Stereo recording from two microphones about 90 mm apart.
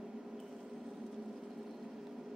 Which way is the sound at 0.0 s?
5° right (ahead or behind).